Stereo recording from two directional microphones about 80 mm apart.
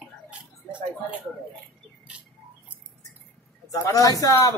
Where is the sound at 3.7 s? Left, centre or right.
Left.